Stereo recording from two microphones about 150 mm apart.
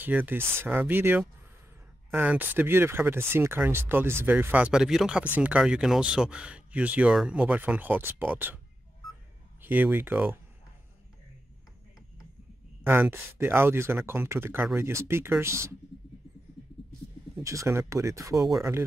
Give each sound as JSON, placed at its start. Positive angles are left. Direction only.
{"t": 0.0, "sound": "speech", "side_deg": -10}
{"t": 9.6, "sound": "speech", "side_deg": -10}
{"t": 12.8, "sound": "speech", "side_deg": -15}
{"t": 17.4, "sound": "speech", "side_deg": -20}